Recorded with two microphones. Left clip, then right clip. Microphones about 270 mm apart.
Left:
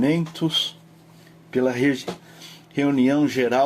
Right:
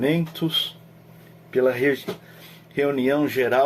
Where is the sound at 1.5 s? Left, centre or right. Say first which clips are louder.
Right 1 dB; left.